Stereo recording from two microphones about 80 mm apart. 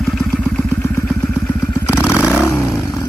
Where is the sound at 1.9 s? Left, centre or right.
Centre.